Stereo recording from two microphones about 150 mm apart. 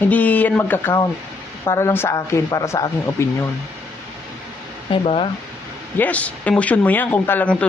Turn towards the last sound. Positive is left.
turn(degrees=10)  # may be behind; listen again after turning